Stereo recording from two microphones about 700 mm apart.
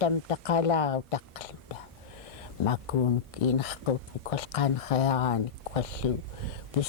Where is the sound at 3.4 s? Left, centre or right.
Left.